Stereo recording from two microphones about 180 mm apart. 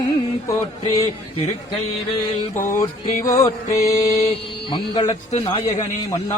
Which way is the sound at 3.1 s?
45° left (ahead or behind).